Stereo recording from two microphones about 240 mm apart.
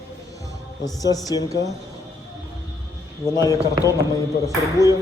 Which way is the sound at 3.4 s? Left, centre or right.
Centre.